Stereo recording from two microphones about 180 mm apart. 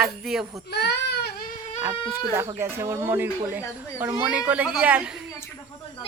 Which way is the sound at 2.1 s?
15° right (ahead or behind).